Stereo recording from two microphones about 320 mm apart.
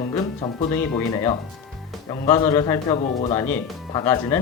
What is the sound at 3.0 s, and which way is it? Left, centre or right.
Speech, left.